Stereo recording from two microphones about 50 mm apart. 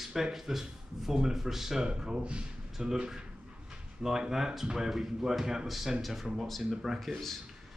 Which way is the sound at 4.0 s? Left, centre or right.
Centre.